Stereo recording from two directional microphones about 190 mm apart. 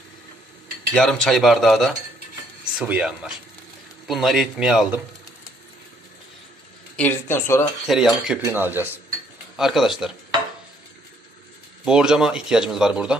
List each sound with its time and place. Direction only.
0.9 s speech: centre (ahead or behind)
6.9 s speech: 10° left (ahead or behind)
7.9 s speech: centre (ahead or behind)
11.9 s speech: 5° right (ahead or behind)